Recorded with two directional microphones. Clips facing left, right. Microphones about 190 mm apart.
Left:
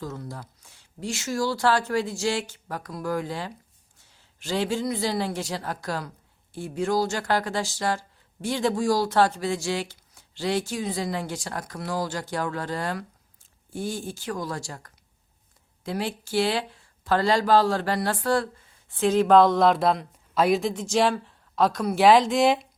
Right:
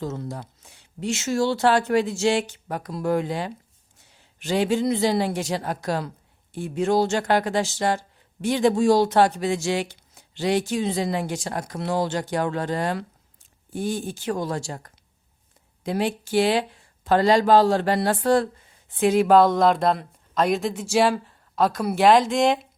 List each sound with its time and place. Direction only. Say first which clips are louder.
0.0 s a man's voice: right 5 dB; 25° right (ahead or behind); by 22.6 s centre (ahead or behind)